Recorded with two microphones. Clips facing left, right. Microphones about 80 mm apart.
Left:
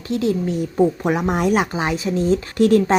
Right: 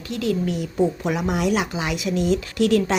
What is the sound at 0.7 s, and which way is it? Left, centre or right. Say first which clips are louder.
A woman's voice: left 4 dB; left.